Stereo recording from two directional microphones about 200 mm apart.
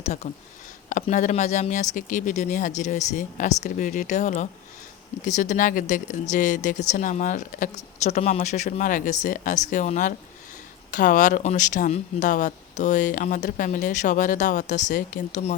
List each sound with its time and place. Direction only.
0.0 s speech: 35° left (ahead or behind)